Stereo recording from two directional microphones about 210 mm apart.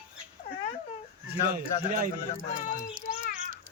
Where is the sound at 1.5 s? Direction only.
40° right (ahead or behind).